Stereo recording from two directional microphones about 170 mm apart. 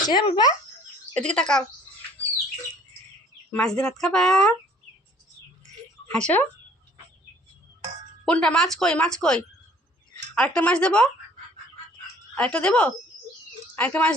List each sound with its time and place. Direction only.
0.1 s speech: 25° left (ahead or behind)
1.1 s speech: 5° left (ahead or behind)
3.5 s speech: 5° left (ahead or behind)
6.1 s speech: 5° left (ahead or behind)
8.2 s speech: 5° left (ahead or behind)
12.3 s speech: 5° left (ahead or behind)